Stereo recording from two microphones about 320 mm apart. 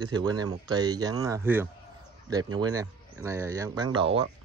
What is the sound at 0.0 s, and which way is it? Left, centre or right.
Speech, centre.